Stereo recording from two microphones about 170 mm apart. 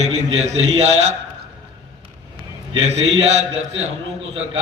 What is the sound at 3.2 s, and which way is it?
Speech, 40° right (ahead or behind).